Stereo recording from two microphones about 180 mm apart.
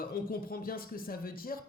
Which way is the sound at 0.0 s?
55° left (ahead or behind).